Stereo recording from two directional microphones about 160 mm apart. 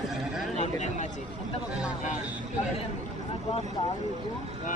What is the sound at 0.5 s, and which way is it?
Speech, 45° left (ahead or behind).